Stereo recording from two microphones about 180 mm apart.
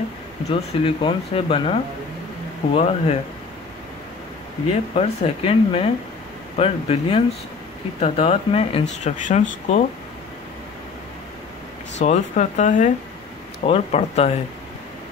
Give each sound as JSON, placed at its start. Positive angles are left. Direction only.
{"t": 0.5, "sound": "speech", "side_deg": 30}
{"t": 4.9, "sound": "speech", "side_deg": 30}
{"t": 9.0, "sound": "speech", "side_deg": 40}
{"t": 12.0, "sound": "speech", "side_deg": 40}